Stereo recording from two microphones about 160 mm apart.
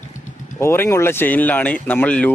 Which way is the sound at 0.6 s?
15° left (ahead or behind).